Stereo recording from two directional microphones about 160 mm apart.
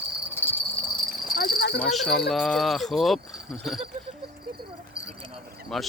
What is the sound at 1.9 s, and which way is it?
Speech, centre (ahead or behind).